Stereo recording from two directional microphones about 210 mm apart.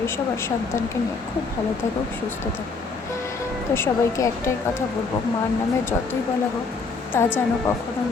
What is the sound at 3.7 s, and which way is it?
Speech, 10° left (ahead or behind).